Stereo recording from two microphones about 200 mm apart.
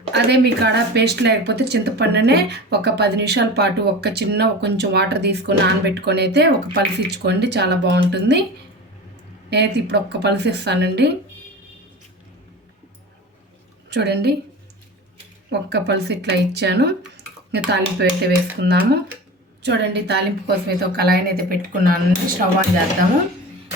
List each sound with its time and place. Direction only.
0.1 s speech: 55° right (ahead or behind)
9.5 s speech: 55° right (ahead or behind)
13.9 s speech: 55° right (ahead or behind)
15.4 s a woman's voice: 55° right (ahead or behind)